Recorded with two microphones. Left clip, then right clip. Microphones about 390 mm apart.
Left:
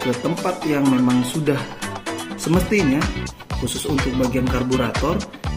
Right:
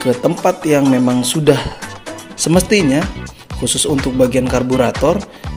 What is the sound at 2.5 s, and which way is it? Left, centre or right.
Speech, right.